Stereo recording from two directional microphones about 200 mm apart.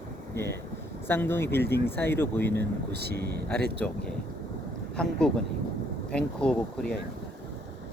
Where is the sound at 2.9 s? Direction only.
55° right (ahead or behind).